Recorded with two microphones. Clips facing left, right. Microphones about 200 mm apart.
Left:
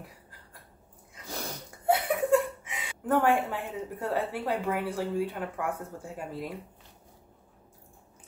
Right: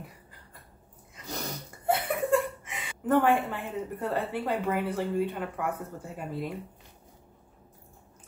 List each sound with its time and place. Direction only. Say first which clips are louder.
1.1 s sneeze: right 1 dB; 5° left (ahead or behind)
1.9 s speech: left 2 dB; centre (ahead or behind)